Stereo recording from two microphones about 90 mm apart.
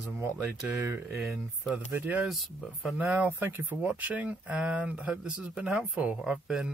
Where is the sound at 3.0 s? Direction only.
15° right (ahead or behind).